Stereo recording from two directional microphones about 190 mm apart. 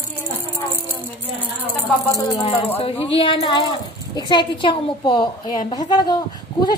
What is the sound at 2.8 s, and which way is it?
A woman's voice, 30° left (ahead or behind).